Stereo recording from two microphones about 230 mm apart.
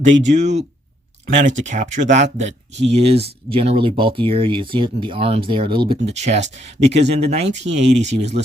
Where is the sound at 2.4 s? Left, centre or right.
Right.